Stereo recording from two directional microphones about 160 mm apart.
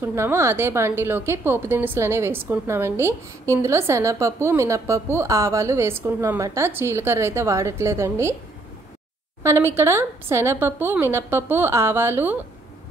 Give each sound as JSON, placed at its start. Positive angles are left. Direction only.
{"t": 0.0, "sound": "a woman's voice", "side_deg": -15}
{"t": 9.4, "sound": "a woman's voice", "side_deg": -15}